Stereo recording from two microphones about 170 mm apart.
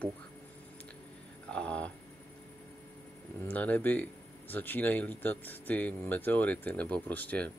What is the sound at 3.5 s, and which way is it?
Speech, 10° left (ahead or behind).